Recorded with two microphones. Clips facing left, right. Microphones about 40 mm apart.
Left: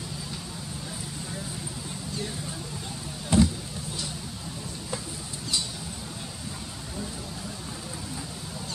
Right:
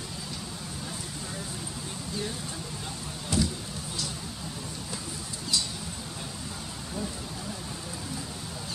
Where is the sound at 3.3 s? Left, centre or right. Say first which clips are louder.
Left 6 dB; left.